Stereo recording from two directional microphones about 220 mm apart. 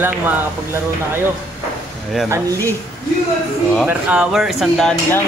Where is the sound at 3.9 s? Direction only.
5° right (ahead or behind).